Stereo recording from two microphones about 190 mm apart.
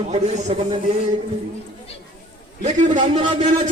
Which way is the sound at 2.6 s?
40° right (ahead or behind).